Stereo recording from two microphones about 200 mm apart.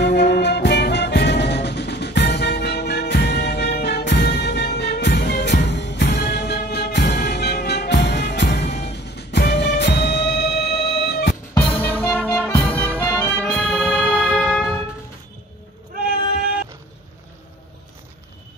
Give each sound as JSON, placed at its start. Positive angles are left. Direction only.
{"t": 0.0, "sound": "music", "side_deg": 55}
{"t": 11.5, "sound": "music", "side_deg": 10}